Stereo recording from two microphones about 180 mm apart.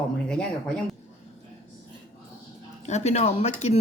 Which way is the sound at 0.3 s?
5° left (ahead or behind).